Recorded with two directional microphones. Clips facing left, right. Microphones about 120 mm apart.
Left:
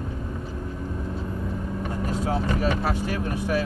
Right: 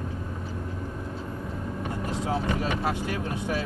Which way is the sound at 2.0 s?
25° right (ahead or behind).